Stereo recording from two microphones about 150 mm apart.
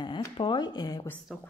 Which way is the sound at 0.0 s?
30° left (ahead or behind).